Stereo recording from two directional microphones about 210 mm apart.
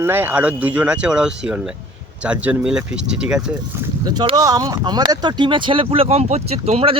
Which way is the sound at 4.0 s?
20° right (ahead or behind).